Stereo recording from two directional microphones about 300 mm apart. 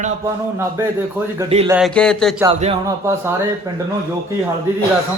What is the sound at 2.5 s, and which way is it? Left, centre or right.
A man's voice, right.